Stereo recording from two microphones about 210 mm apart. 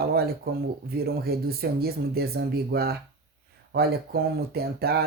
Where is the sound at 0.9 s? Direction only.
45° right (ahead or behind).